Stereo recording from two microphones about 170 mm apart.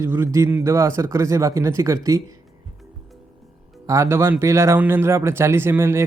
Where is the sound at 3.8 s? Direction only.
15° right (ahead or behind).